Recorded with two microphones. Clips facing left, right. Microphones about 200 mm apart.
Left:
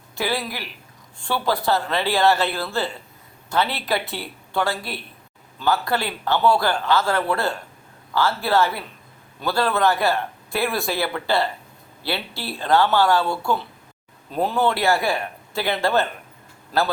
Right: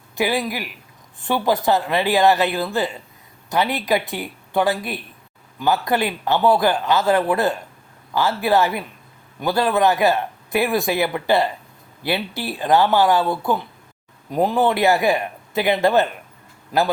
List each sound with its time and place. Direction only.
0.2 s speech: 15° right (ahead or behind)